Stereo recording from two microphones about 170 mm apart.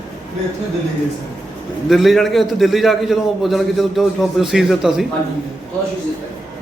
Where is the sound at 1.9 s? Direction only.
Centre (ahead or behind).